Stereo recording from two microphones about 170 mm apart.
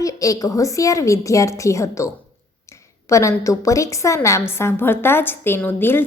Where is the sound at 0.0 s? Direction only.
20° left (ahead or behind).